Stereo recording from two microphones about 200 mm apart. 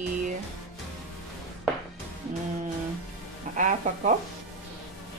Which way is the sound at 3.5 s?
40° right (ahead or behind).